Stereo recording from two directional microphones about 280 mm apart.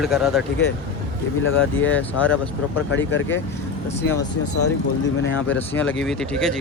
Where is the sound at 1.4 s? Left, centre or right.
Left.